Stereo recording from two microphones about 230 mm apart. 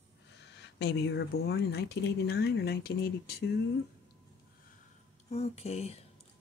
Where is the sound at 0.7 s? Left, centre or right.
Left.